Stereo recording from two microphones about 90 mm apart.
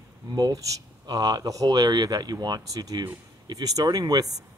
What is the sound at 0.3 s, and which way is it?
Speech, 40° right (ahead or behind).